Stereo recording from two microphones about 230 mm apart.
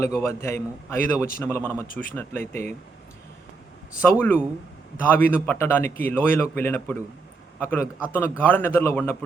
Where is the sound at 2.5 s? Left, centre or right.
Right.